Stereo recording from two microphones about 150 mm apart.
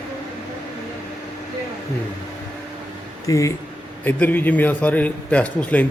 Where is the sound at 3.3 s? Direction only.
20° left (ahead or behind).